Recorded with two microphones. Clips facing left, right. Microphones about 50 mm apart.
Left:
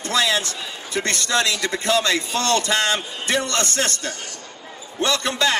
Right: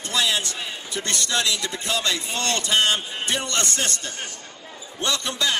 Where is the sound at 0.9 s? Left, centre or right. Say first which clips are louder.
Left 5 dB; left.